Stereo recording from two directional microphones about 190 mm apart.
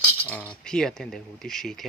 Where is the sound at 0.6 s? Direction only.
5° left (ahead or behind).